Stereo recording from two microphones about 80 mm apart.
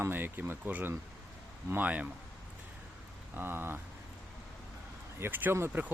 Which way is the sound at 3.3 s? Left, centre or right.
Right.